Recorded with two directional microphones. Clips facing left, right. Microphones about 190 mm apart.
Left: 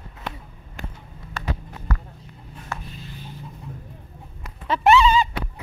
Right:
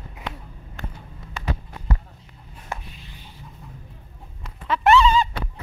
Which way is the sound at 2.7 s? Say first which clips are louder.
Even; 20° right (ahead or behind).